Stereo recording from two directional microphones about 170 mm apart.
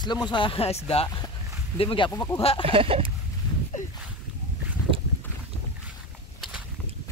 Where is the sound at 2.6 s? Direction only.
35° right (ahead or behind).